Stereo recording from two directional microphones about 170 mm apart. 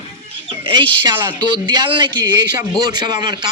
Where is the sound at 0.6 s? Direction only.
30° right (ahead or behind).